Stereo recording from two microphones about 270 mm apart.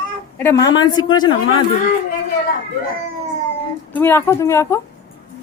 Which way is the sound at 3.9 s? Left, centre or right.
Centre.